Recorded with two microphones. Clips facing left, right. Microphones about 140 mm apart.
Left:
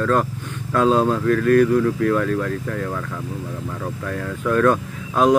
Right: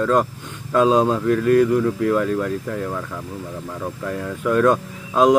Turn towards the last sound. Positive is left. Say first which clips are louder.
# right 2 dB
turn(degrees=-20)  # may be behind; listen again after turning